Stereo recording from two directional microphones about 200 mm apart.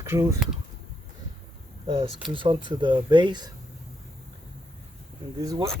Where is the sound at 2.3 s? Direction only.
25° right (ahead or behind).